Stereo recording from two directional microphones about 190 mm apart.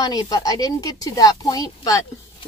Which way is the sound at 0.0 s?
20° left (ahead or behind).